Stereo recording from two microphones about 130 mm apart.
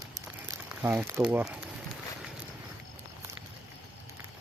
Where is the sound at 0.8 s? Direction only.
15° right (ahead or behind).